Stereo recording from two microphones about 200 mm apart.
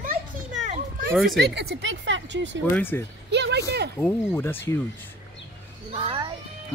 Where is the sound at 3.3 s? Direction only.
60° right (ahead or behind).